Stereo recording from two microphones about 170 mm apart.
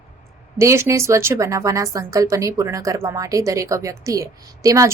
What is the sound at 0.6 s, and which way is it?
A woman's voice, 15° right (ahead or behind).